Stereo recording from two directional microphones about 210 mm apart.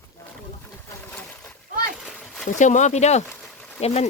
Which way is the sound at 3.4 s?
5° left (ahead or behind).